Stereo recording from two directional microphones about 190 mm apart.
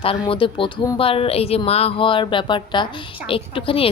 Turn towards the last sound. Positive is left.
turn(degrees=30)  # may be behind; listen again after turning